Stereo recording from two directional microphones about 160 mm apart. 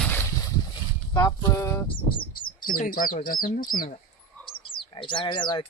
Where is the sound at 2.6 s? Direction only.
60° left (ahead or behind).